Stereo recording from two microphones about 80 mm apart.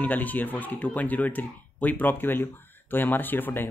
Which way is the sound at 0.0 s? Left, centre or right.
Left.